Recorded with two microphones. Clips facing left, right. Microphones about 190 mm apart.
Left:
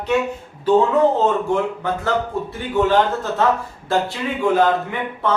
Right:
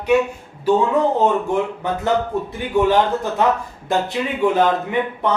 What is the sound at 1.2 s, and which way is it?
A man's voice, 20° right (ahead or behind).